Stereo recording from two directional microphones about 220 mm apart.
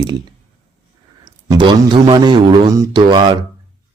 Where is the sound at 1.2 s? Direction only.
20° right (ahead or behind).